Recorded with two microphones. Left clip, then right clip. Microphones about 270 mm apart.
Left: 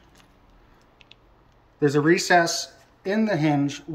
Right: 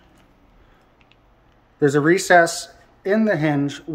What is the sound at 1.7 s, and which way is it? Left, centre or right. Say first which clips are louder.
Speech: right 3 dB; right.